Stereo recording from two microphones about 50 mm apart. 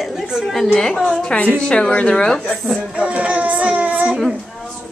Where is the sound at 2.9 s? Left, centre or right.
Right.